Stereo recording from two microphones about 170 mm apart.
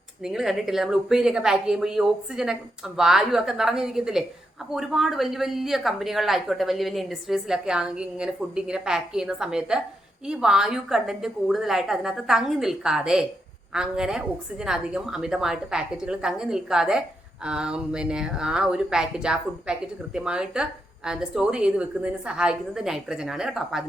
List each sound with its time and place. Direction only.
0.2 s speech: centre (ahead or behind)